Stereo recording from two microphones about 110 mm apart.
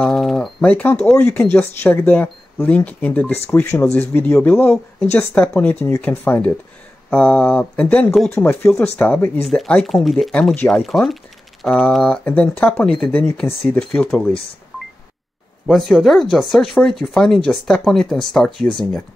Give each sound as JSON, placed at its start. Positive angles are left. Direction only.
{"t": 0.0, "sound": "a sound", "side_deg": 0}
{"t": 0.6, "sound": "speech", "side_deg": 10}
{"t": 1.6, "sound": "speech", "side_deg": 20}
{"t": 8.1, "sound": "speech", "side_deg": 0}
{"t": 8.5, "sound": "speech", "side_deg": 20}
{"t": 13.2, "sound": "speech", "side_deg": 20}
{"t": 13.7, "sound": "speech", "side_deg": 5}
{"t": 15.6, "sound": "speech", "side_deg": 5}